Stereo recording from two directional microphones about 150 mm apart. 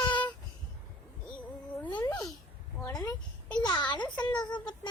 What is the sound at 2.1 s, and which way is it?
A child's voice, 10° left (ahead or behind).